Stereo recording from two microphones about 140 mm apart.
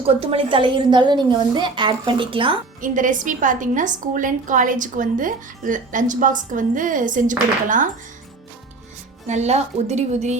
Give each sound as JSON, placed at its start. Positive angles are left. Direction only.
{"t": 0.0, "sound": "a woman's voice", "side_deg": -45}
{"t": 2.8, "sound": "a woman's voice", "side_deg": -70}
{"t": 9.2, "sound": "a woman's voice", "side_deg": -55}